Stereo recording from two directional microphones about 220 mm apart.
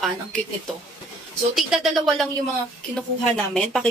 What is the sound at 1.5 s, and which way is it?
Speech, centre (ahead or behind).